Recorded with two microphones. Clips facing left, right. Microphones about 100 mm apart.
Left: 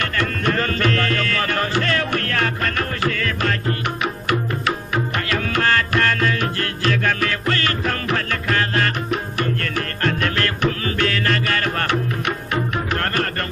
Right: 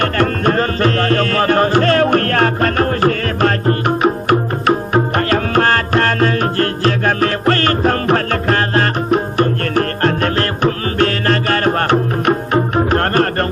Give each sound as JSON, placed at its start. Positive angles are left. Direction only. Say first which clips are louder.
{"t": 0.0, "sound": "music", "louder": "right 7 dB", "side_deg": -40}